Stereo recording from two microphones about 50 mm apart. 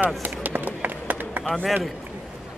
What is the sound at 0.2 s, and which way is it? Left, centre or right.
Run, right.